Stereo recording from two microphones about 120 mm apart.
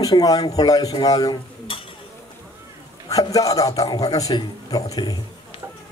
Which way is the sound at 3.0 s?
30° left (ahead or behind).